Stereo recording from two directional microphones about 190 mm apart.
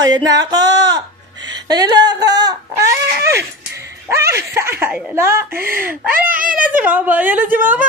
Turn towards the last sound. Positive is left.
turn(degrees=-10)  # may be behind; listen again after turning